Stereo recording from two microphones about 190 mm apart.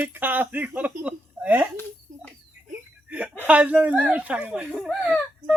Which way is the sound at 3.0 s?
5° right (ahead or behind).